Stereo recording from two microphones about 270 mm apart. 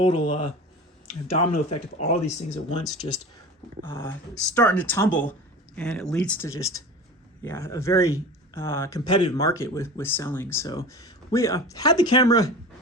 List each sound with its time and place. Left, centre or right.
0.0 s speech: left